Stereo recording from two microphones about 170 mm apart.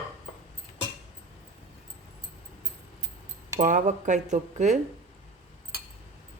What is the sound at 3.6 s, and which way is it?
Speech, 45° right (ahead or behind).